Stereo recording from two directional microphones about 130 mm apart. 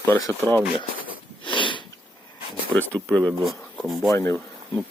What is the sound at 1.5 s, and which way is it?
Sniff, 40° left (ahead or behind).